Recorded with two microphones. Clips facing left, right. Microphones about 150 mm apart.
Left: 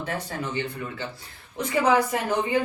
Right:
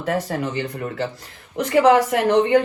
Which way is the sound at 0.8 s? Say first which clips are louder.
Right 7 dB; 80° right.